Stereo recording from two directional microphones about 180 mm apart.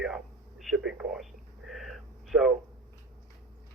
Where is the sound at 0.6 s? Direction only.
Centre (ahead or behind).